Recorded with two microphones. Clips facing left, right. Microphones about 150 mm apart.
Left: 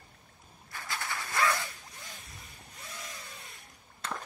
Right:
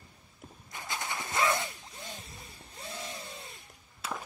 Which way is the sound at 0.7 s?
20° right (ahead or behind).